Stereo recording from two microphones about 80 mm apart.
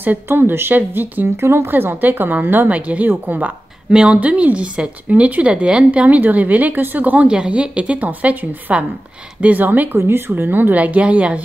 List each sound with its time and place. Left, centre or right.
0.0 s a woman's voice: right